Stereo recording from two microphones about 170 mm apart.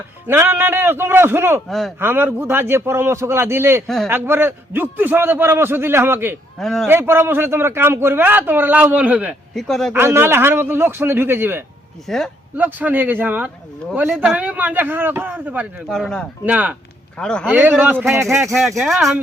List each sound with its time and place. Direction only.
0.3 s a man's voice: 15° right (ahead or behind)
3.8 s speech: centre (ahead or behind)
4.1 s a man's voice: 15° right (ahead or behind)
6.6 s speech: centre (ahead or behind)
6.8 s a man's voice: 15° right (ahead or behind)
9.9 s a man's voice: 15° right (ahead or behind)
12.0 s speech: centre (ahead or behind)
12.5 s a man's voice: 10° right (ahead or behind)
15.9 s speech: 5° left (ahead or behind)
16.5 s a man's voice: 10° right (ahead or behind)
17.2 s speech: 5° left (ahead or behind)
17.5 s a man's voice: 10° right (ahead or behind)